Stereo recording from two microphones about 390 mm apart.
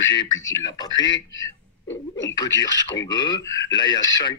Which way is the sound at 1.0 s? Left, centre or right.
Left.